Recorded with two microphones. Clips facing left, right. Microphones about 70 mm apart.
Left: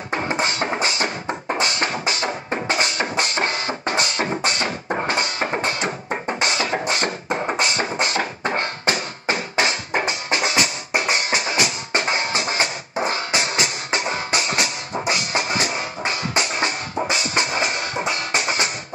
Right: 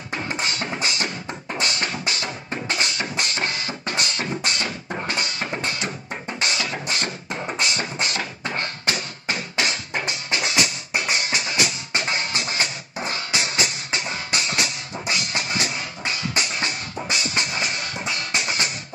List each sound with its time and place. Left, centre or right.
0.1 s music: left
6.5 s beatboxing: left
11.0 s music: left